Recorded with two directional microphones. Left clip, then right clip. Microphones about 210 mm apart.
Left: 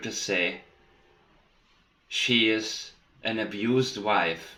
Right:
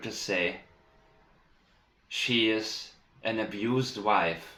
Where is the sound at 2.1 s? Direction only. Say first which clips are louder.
Left 3 dB; 25° left (ahead or behind).